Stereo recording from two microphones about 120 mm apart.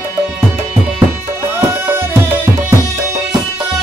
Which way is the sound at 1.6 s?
20° right (ahead or behind).